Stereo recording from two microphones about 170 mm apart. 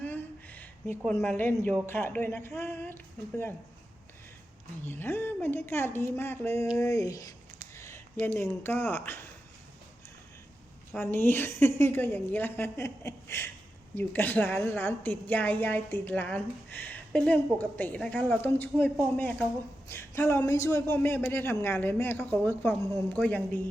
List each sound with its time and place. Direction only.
0.0 s a sound: 10° left (ahead or behind)
1.9 s a woman's voice: 10° left (ahead or behind)
4.8 s a woman's voice: 15° left (ahead or behind)
7.8 s a sound: 15° left (ahead or behind)
8.4 s a woman's voice: 15° left (ahead or behind)
10.9 s a woman's voice: 10° left (ahead or behind)